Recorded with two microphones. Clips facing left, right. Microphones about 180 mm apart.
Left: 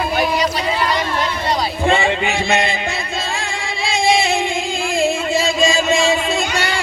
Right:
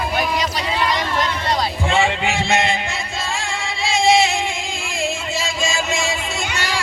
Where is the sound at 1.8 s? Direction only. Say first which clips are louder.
Left 4 dB; 60° left (ahead or behind).